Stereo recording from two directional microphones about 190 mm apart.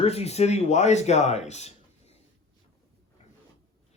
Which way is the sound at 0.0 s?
35° left (ahead or behind).